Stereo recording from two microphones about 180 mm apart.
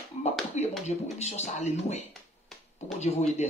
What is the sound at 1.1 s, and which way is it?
Speech, 40° left (ahead or behind).